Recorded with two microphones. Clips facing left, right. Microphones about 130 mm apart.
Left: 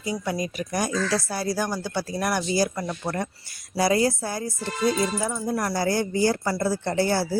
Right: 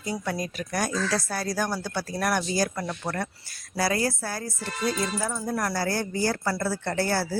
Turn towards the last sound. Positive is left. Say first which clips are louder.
# left 3 dB
turn(degrees=15)  # may be behind; listen again after turning